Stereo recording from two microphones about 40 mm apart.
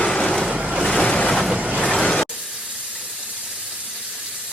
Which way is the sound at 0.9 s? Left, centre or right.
Left.